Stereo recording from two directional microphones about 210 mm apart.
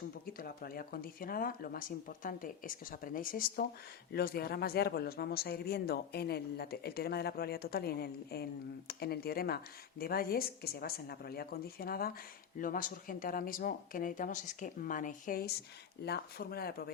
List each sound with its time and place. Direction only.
0.3 s speech: 45° left (ahead or behind)